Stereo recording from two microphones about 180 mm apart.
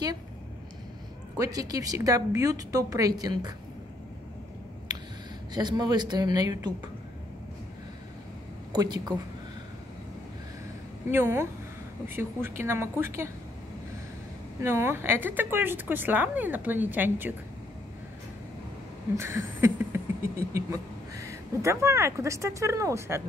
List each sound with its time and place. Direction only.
1.4 s speech: 20° right (ahead or behind)
5.5 s speech: 25° right (ahead or behind)
8.7 s speech: 20° right (ahead or behind)
11.1 s speech: 15° right (ahead or behind)
14.6 s speech: 15° right (ahead or behind)
19.1 s a sound: 15° right (ahead or behind)
20.3 s speech: 15° right (ahead or behind)